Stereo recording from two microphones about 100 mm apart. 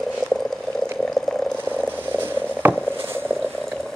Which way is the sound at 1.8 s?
20° right (ahead or behind).